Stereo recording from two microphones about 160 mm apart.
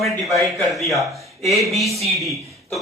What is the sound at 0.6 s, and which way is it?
A man's voice, centre (ahead or behind).